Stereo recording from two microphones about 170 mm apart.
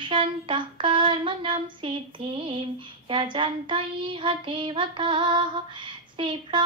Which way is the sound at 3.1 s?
30° right (ahead or behind).